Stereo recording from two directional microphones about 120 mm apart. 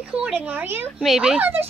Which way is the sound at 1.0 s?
Centre (ahead or behind).